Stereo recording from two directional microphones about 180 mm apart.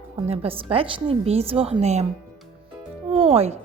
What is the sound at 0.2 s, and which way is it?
Speech, 30° right (ahead or behind).